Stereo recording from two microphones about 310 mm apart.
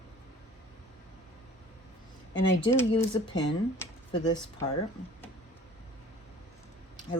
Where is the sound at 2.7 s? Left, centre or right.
Centre.